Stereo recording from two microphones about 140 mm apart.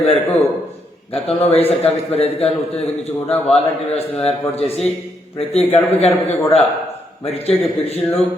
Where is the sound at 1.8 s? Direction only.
50° left (ahead or behind).